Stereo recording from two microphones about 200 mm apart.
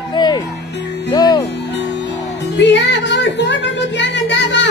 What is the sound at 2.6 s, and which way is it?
Music, 60° left (ahead or behind).